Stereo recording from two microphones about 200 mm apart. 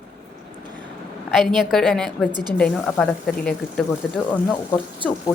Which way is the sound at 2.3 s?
20° right (ahead or behind).